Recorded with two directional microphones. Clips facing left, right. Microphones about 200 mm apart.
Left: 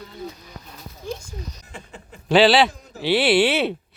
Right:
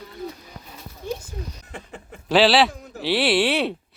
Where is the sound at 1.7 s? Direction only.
55° right (ahead or behind).